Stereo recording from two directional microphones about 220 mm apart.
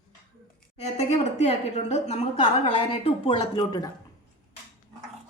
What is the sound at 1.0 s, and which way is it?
A woman's voice, 30° left (ahead or behind).